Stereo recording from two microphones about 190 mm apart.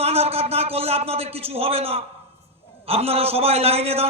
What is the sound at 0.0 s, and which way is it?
A man's voice, 30° right (ahead or behind).